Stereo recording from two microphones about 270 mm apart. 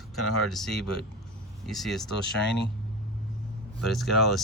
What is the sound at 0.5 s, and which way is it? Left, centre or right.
Speech, centre.